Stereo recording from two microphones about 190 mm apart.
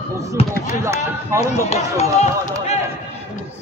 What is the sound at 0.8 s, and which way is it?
Run, 15° right (ahead or behind).